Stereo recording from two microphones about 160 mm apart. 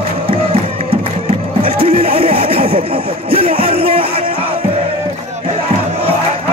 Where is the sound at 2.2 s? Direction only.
40° right (ahead or behind).